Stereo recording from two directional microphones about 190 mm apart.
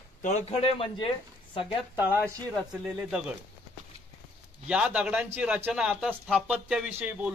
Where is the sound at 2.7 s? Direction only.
5° right (ahead or behind).